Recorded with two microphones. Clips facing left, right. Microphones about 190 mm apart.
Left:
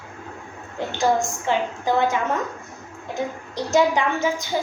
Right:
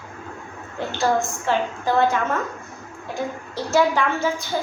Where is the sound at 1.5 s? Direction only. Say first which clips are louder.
Even; 15° left (ahead or behind).